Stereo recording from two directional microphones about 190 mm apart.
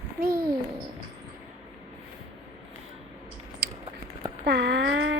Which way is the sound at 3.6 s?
50° right (ahead or behind).